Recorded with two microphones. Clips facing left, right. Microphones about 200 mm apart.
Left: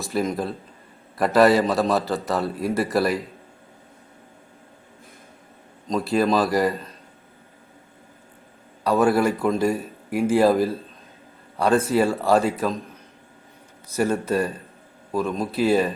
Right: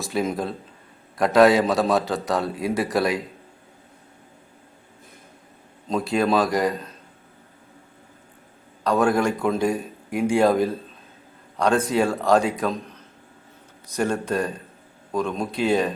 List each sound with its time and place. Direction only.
0.0 s a man's voice: centre (ahead or behind)
5.9 s a man's voice: centre (ahead or behind)
8.8 s a man's voice: 5° left (ahead or behind)
13.9 s a man's voice: 5° left (ahead or behind)